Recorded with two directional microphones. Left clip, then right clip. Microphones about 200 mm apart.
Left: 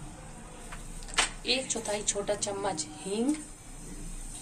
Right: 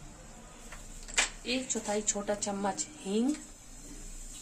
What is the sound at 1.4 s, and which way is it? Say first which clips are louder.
A woman's voice: left 4 dB; 45° right (ahead or behind).